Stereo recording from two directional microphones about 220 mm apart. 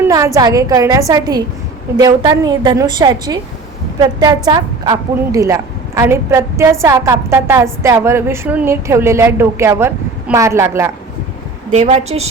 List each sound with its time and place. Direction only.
0.3 s a woman's voice: 15° right (ahead or behind)
11.7 s a woman's voice: 30° right (ahead or behind)